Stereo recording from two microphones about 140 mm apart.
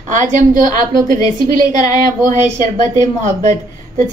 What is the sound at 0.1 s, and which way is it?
A woman's voice, 70° right (ahead or behind).